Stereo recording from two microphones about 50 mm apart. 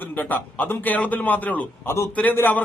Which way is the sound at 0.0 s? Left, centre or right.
Left.